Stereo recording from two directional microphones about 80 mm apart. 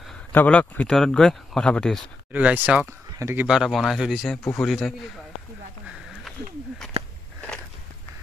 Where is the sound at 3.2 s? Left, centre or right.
Right.